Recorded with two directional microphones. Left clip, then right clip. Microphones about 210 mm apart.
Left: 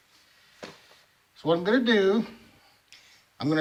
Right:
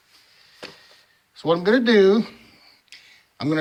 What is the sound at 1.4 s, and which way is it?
Speech, 45° right (ahead or behind).